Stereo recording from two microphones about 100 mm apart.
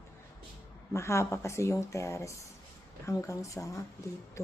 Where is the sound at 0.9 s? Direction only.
30° left (ahead or behind).